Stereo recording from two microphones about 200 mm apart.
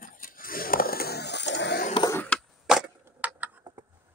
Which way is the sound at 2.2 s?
Centre (ahead or behind).